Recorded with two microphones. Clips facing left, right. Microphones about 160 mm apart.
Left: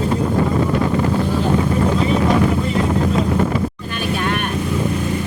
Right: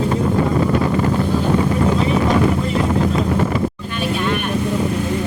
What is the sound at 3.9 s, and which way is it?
Vehicle, 50° left (ahead or behind).